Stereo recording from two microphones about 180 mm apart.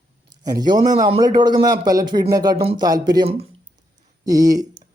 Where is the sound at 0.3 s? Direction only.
20° right (ahead or behind).